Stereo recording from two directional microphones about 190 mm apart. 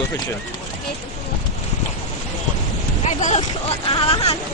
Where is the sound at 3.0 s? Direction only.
35° left (ahead or behind).